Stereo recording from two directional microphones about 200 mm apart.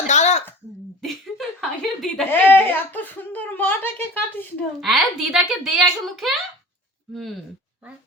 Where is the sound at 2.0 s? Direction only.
5° left (ahead or behind).